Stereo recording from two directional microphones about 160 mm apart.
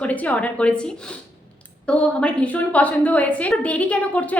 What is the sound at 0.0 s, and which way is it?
A woman's voice, 10° left (ahead or behind).